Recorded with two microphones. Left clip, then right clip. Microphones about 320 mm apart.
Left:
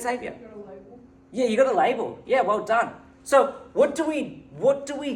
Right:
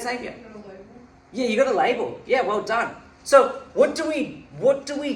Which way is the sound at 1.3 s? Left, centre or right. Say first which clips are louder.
Even; left.